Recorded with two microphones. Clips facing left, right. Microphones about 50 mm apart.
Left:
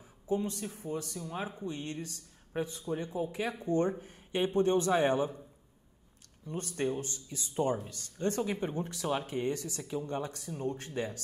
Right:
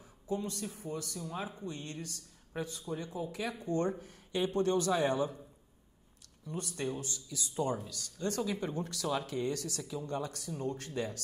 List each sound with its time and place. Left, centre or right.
0.3 s speech: left
6.4 s speech: left
9.8 s speech: left